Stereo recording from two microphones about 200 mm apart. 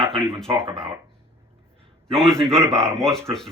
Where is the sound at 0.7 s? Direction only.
25° right (ahead or behind).